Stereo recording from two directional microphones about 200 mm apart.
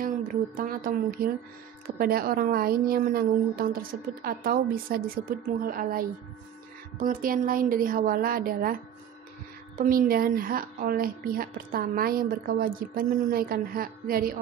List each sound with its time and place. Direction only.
0.0 s speech: 45° right (ahead or behind)
9.8 s speech: 45° right (ahead or behind)